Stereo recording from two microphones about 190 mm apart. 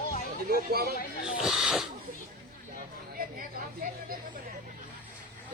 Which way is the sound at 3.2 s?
50° right (ahead or behind).